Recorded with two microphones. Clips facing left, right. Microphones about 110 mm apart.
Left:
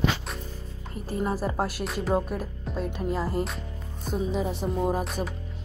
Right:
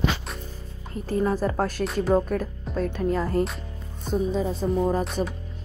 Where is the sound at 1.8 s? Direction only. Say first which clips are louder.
Right 6 dB; centre (ahead or behind).